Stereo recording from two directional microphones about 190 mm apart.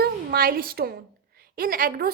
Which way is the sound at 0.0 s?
55° right (ahead or behind).